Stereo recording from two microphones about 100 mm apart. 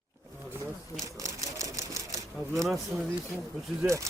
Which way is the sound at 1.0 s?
35° right (ahead or behind).